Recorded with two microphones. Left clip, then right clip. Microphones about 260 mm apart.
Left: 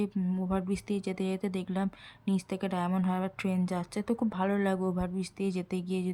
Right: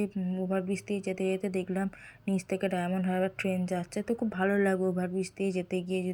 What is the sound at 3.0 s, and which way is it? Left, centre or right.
Speech, left.